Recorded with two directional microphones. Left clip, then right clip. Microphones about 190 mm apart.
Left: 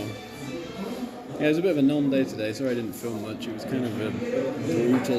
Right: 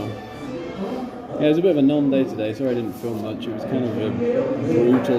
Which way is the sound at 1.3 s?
5° left (ahead or behind).